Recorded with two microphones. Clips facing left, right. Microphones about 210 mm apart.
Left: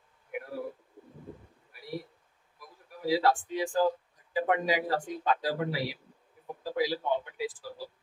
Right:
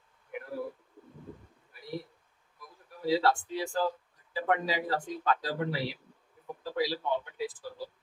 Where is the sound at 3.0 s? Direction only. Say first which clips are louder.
Left 1 dB; 15° left (ahead or behind).